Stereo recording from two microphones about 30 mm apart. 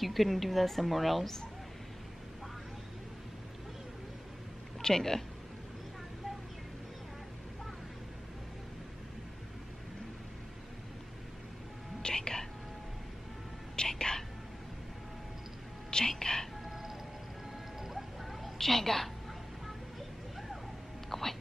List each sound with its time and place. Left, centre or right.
0.0 s a woman's voice: centre
4.8 s a woman's voice: centre
12.0 s whispering: left
13.7 s whispering: left
16.1 s whispering: left
18.6 s a woman's voice: centre
21.1 s a sound: centre